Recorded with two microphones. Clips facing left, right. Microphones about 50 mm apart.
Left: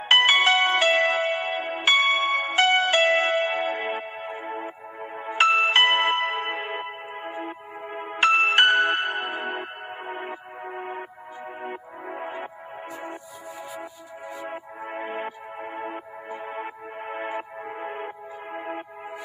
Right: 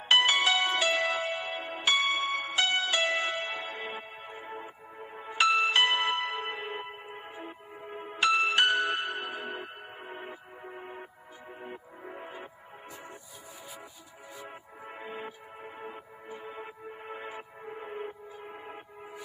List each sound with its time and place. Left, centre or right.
0.0 s music: left
14.4 s music: left